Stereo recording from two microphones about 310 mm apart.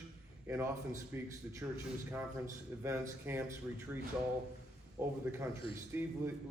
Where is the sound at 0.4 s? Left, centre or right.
Centre.